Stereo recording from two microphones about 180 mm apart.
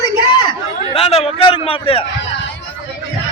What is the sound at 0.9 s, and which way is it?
A man's voice, 35° left (ahead or behind).